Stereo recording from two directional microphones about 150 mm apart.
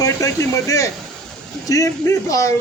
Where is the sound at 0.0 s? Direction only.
20° left (ahead or behind).